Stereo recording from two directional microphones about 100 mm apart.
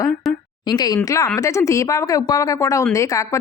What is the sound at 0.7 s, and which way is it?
Speech, 45° left (ahead or behind).